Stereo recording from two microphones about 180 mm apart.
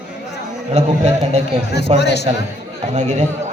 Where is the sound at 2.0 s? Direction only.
70° left (ahead or behind).